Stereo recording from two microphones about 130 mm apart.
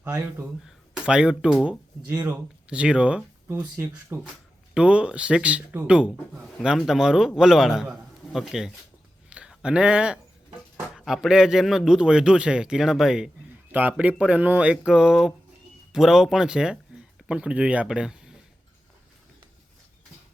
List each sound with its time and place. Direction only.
0.0 s a man's voice: 15° right (ahead or behind)